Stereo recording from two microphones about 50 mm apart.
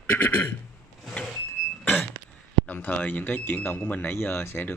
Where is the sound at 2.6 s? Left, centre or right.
Left.